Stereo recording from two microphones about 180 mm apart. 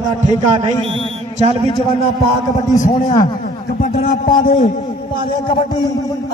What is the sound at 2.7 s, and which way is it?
A man's voice, 45° left (ahead or behind).